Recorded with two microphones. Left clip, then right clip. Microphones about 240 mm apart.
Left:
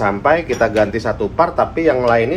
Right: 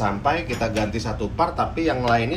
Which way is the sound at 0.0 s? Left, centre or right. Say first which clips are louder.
Left 8 dB; centre.